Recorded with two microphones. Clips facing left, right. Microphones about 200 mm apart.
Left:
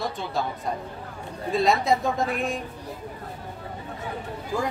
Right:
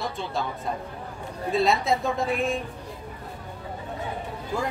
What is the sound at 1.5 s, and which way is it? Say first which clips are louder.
A woman's voice: left 1 dB; centre (ahead or behind).